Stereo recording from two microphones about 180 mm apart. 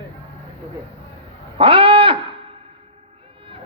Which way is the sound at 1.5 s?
30° right (ahead or behind).